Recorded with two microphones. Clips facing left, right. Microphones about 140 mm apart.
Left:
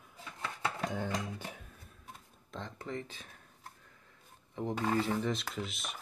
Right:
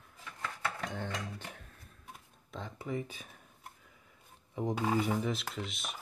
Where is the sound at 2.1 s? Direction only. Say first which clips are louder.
Even; 5° right (ahead or behind).